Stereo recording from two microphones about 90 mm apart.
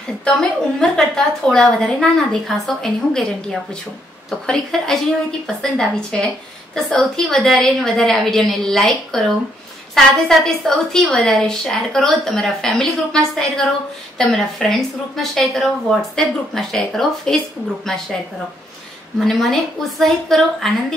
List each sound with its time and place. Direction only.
0.2 s a woman's voice: 10° left (ahead or behind)
19.1 s a woman's voice: centre (ahead or behind)